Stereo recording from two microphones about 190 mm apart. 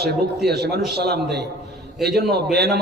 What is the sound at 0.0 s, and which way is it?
A man's voice, 60° right (ahead or behind).